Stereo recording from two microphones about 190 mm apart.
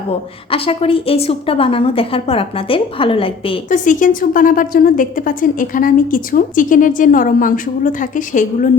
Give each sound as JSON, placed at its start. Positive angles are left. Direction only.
{"t": 0.5, "sound": "a woman's voice", "side_deg": 30}
{"t": 3.7, "sound": "a woman's voice", "side_deg": 45}